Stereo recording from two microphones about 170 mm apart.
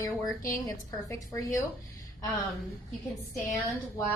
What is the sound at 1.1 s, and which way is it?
Speech, 20° left (ahead or behind).